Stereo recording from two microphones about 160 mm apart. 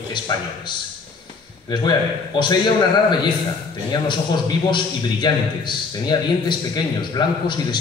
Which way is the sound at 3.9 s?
25° left (ahead or behind).